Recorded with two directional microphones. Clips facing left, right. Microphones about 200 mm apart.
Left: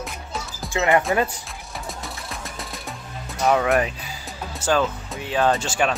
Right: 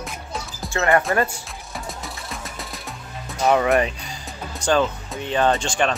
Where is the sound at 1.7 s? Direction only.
Centre (ahead or behind).